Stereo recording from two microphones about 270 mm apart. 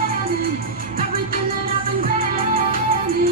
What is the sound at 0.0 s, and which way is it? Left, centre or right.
Music, right.